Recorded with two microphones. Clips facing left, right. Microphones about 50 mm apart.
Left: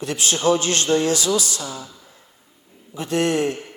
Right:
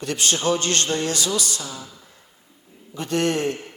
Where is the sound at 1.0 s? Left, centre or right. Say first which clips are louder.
Left 4 dB; right.